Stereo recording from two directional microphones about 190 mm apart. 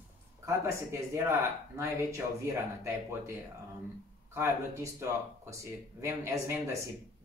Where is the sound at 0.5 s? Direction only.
15° right (ahead or behind).